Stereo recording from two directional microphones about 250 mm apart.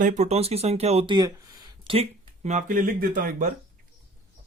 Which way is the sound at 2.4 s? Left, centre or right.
Right.